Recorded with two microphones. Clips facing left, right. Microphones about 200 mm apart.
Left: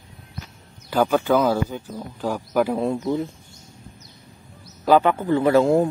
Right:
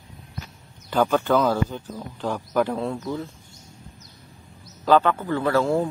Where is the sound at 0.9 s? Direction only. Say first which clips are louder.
Left 1 dB; 5° left (ahead or behind).